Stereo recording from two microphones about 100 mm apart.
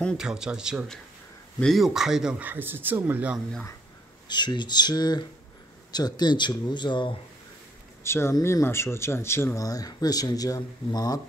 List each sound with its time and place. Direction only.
0.2 s a man's voice: 5° right (ahead or behind)
2.4 s speech: 20° right (ahead or behind)
4.3 s a man's voice: 50° left (ahead or behind)
8.0 s speech: 25° left (ahead or behind)